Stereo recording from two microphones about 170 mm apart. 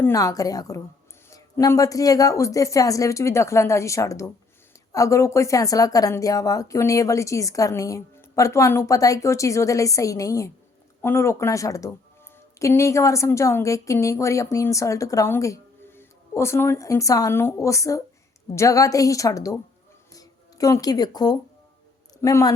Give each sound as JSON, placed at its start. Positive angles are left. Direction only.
{"t": 0.0, "sound": "a woman's voice", "side_deg": 20}